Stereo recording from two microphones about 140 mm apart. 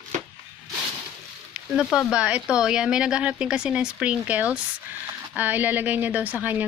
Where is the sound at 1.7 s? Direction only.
5° right (ahead or behind).